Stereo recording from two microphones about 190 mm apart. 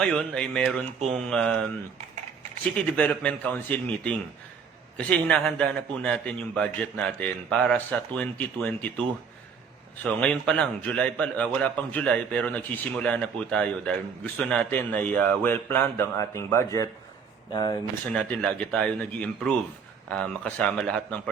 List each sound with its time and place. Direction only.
0.0 s speech: 5° left (ahead or behind)
2.7 s a man's voice: 5° left (ahead or behind); by 17.7 s 20° left (ahead or behind)
18.1 s speech: 5° left (ahead or behind)